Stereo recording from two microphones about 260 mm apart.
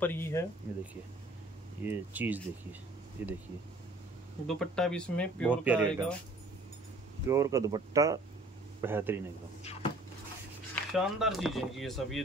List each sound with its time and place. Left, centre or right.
0.0 s speech: centre
1.9 s speech: centre
4.5 s speech: centre
5.6 s speech: centre
7.2 s speech: centre
9.6 s cupboard open or close: left
10.7 s speech: centre